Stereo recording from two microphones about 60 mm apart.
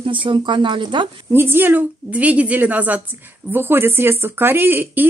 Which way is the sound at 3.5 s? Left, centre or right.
Right.